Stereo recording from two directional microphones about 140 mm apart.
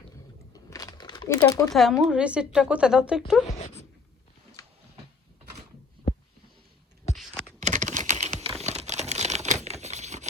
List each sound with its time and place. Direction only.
0.5 s a sound: 25° left (ahead or behind)
1.7 s a woman's voice: centre (ahead or behind)
7.6 s crumpling: 60° right (ahead or behind)